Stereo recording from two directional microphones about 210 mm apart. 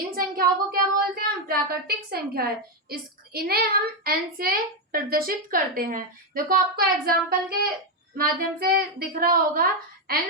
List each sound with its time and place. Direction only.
0.2 s a child's voice: 45° right (ahead or behind)